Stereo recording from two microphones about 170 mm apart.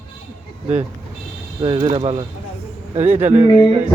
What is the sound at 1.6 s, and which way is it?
Speech, 30° right (ahead or behind).